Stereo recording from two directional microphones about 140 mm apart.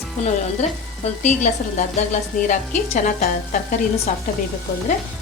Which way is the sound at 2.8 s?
60° left (ahead or behind).